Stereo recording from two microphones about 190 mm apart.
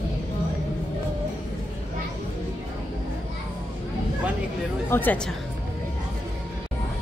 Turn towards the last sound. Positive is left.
turn(degrees=10)  # may be behind; listen again after turning